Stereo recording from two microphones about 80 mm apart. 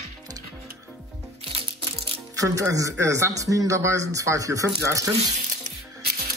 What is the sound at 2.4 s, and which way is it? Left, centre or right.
A man's voice, right.